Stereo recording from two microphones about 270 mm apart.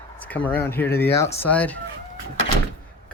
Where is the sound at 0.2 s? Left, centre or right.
Centre.